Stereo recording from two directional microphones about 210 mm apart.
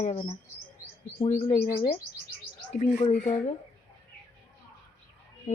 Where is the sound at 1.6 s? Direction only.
45° left (ahead or behind).